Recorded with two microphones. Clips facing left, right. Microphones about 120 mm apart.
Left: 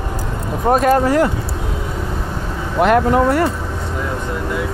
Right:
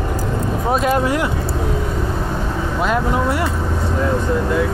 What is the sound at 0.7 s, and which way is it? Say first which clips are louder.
Speech: left 5 dB; 45° left (ahead or behind).